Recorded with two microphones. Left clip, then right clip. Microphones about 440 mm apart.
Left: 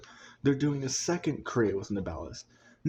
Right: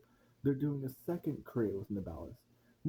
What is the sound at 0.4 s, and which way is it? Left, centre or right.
Speech, right.